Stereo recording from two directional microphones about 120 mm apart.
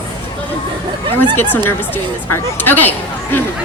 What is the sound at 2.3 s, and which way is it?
Speech, 15° left (ahead or behind).